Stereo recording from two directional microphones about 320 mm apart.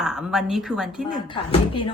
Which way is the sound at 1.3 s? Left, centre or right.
Centre.